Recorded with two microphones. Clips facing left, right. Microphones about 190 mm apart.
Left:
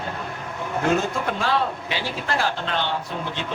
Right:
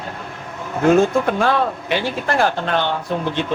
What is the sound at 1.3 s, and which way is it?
Speech, 55° right (ahead or behind).